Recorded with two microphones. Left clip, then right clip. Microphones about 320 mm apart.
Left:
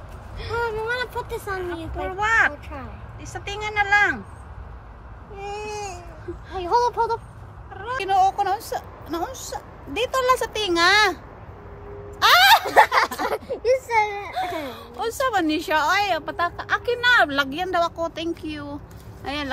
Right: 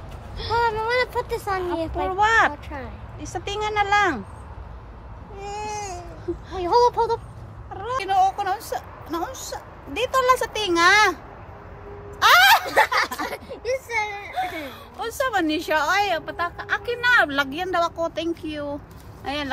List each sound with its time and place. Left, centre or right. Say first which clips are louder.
0.6 s a sound: right 4 dB; right
2.0 s speech: right 1 dB; centre
5.5 s baby cry: right 1 dB; right
6.6 s a sound: right 2 dB; right
7.7 s speech: right 2 dB; centre
8.0 s a woman's voice: left 1 dB; centre
12.2 s a sound: even; centre
12.6 s speech: left 3 dB; centre
14.6 s a woman's voice: left 3 dB; centre